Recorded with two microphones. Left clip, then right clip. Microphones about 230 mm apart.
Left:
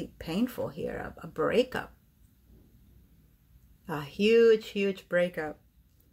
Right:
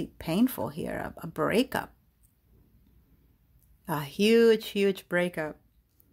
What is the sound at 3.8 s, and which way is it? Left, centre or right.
Speech, right.